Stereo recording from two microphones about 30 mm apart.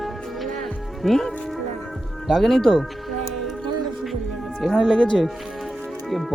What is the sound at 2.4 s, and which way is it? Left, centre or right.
Speech, centre.